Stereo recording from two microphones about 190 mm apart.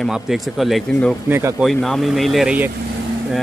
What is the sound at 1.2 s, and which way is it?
Speech, 10° right (ahead or behind).